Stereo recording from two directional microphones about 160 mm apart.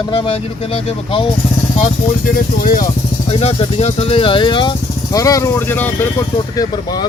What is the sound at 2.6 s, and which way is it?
Speech, 60° left (ahead or behind).